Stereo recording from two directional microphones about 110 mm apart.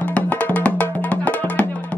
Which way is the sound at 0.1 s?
10° left (ahead or behind).